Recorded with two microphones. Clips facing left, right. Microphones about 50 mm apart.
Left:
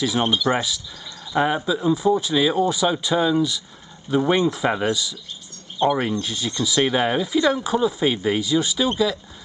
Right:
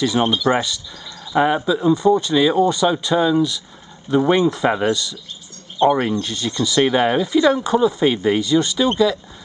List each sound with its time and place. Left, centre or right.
0.0 s speech: centre
6.2 s speech: centre